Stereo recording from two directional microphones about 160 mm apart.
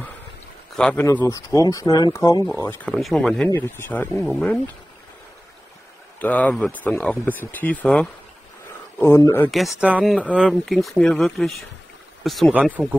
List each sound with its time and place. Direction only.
0.7 s speech: 5° left (ahead or behind)
1.0 s speech: 20° left (ahead or behind)
2.9 s speech: centre (ahead or behind)
3.4 s speech: 15° left (ahead or behind)
4.1 s speech: centre (ahead or behind)
6.1 s speech: 10° left (ahead or behind)
9.5 s speech: centre (ahead or behind)